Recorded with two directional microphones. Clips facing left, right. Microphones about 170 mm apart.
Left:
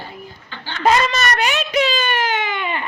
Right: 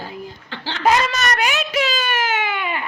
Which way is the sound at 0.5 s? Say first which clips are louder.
Right 3 dB; 90° right.